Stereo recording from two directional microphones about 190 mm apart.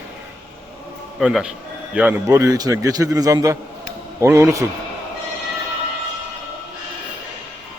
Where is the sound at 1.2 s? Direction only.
5° right (ahead or behind).